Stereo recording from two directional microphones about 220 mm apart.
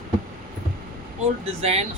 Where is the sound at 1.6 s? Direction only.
30° right (ahead or behind).